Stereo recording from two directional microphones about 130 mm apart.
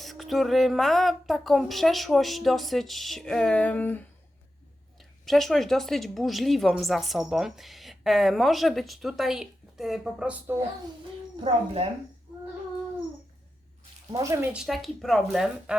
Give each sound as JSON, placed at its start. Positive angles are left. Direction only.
{"t": 0.0, "sound": "speech", "side_deg": 0}
{"t": 4.9, "sound": "speech", "side_deg": 0}
{"t": 11.3, "sound": "speech", "side_deg": -50}
{"t": 14.1, "sound": "speech", "side_deg": -25}
{"t": 14.5, "sound": "speech", "side_deg": 0}